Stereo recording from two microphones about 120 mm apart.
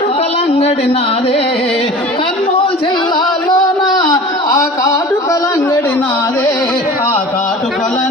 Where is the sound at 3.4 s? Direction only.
35° left (ahead or behind).